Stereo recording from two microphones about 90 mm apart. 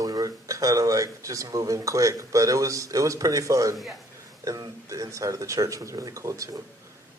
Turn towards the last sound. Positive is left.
turn(degrees=-35)  # may be behind; listen again after turning